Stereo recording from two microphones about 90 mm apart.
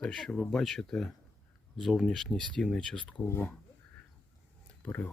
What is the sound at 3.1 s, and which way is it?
Speech, 20° left (ahead or behind).